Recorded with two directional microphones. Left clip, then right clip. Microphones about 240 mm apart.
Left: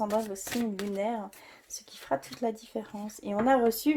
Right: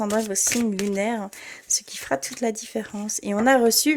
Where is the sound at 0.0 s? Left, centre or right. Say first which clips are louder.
Right 6 dB; right.